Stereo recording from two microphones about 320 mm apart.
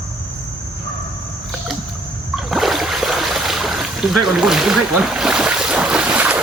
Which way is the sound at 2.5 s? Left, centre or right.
Centre.